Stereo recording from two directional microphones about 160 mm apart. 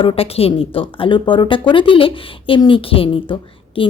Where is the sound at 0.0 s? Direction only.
35° left (ahead or behind).